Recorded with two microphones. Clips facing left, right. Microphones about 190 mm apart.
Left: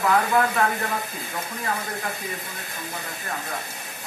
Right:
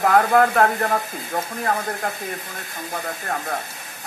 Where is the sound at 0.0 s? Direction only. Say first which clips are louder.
Right 5 dB; 55° right (ahead or behind).